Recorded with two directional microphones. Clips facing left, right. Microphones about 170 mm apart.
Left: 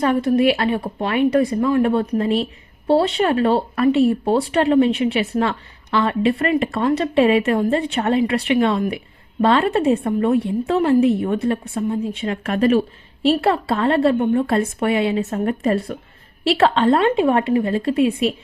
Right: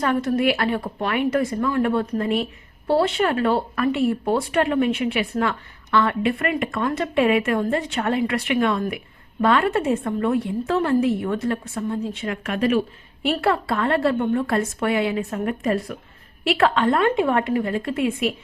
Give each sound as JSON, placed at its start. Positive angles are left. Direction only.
{"t": 0.0, "sound": "speech", "side_deg": 20}
{"t": 13.2, "sound": "speech", "side_deg": 25}
{"t": 15.6, "sound": "speech", "side_deg": 35}